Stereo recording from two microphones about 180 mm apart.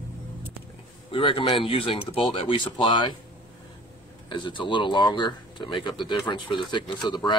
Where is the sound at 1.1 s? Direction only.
30° left (ahead or behind).